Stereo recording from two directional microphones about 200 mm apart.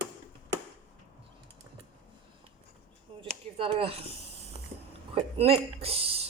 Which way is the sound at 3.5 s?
30° right (ahead or behind).